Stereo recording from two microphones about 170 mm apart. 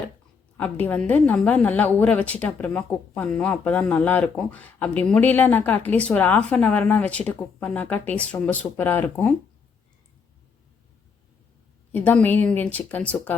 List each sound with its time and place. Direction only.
0.5 s a woman's voice: 10° left (ahead or behind)
11.9 s a woman's voice: 10° left (ahead or behind)